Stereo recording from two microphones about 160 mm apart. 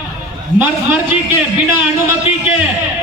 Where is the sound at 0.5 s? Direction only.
15° right (ahead or behind).